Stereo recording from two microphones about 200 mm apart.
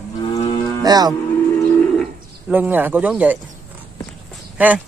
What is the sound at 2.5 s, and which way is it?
Speech, 10° right (ahead or behind).